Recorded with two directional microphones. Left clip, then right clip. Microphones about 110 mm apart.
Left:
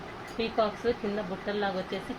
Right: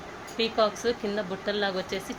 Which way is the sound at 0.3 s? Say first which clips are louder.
Right 4 dB; 30° right (ahead or behind).